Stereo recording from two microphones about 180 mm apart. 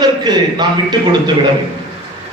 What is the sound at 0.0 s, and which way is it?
Speech, 25° right (ahead or behind).